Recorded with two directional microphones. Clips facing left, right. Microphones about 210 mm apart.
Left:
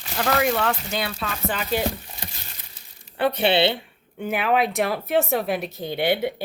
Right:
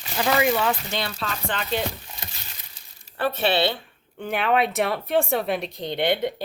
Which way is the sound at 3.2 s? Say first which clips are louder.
Left 3 dB; 20° left (ahead or behind).